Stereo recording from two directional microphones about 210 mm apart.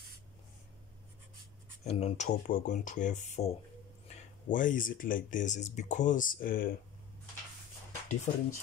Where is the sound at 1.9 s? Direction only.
30° left (ahead or behind).